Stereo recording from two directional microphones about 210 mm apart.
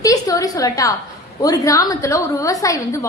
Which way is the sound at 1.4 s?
15° left (ahead or behind).